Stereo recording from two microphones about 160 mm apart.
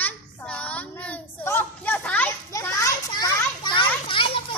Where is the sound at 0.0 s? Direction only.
5° left (ahead or behind).